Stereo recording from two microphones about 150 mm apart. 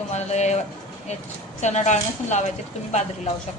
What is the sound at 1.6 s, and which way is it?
Speech, 50° left (ahead or behind).